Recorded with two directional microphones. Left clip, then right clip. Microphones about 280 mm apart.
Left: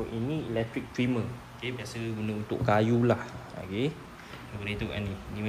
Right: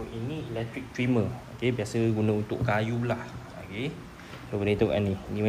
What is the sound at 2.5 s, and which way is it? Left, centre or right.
Speech, centre.